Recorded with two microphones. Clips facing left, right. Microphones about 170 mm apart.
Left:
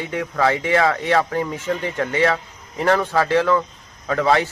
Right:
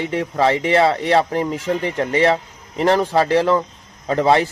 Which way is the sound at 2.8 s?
20° right (ahead or behind).